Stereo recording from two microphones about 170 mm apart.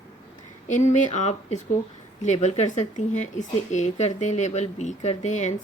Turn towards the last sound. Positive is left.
turn(degrees=45)  # may be behind; listen again after turning